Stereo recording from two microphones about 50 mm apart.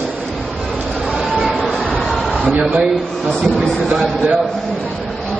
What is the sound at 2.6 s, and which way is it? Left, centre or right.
Speech, centre.